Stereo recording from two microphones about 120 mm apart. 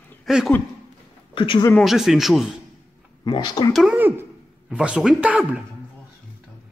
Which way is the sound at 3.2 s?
35° left (ahead or behind).